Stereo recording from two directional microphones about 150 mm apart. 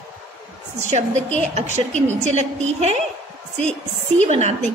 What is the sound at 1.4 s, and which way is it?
A woman's voice, 50° right (ahead or behind).